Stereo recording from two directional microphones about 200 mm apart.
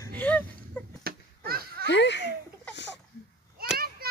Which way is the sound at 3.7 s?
50° right (ahead or behind).